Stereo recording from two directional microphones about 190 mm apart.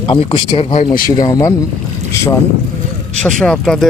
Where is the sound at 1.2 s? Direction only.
15° left (ahead or behind).